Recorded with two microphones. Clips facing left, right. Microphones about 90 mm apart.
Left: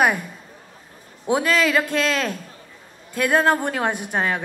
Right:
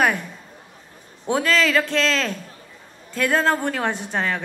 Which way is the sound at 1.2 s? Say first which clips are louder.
Left 1 dB; 10° left (ahead or behind).